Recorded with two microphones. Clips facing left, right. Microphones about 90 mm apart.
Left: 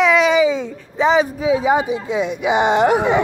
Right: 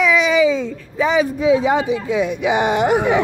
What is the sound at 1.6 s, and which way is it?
A woman's voice, 15° left (ahead or behind).